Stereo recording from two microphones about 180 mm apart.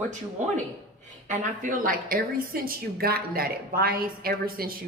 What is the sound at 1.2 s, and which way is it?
A woman's voice, 45° right (ahead or behind).